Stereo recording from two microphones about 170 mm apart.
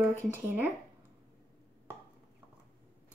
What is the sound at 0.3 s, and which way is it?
Speech, 10° right (ahead or behind).